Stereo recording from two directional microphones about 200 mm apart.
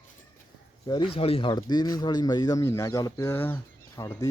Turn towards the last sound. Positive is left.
turn(degrees=15)  # may be behind; listen again after turning